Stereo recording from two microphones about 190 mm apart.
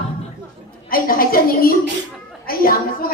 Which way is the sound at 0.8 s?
50° left (ahead or behind).